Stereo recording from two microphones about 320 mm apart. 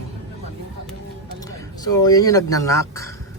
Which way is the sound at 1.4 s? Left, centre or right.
Centre.